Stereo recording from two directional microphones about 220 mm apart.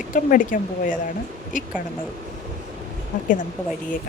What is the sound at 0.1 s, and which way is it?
Speech, 35° left (ahead or behind).